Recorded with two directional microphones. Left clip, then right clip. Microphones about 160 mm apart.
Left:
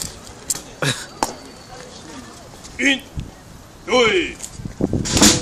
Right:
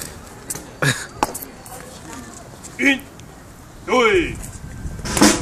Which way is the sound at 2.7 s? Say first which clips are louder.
Even; 10° left (ahead or behind).